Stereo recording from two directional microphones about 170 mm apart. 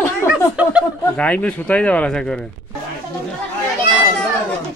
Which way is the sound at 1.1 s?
5° left (ahead or behind).